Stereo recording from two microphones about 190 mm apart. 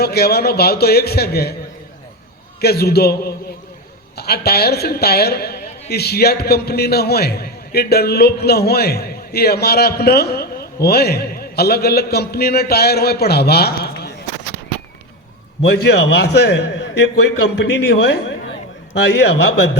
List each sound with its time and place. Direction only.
0.0 s a woman's voice: 55° left (ahead or behind)
2.6 s a woman's voice: 55° left (ahead or behind)
15.6 s a woman's voice: 60° left (ahead or behind)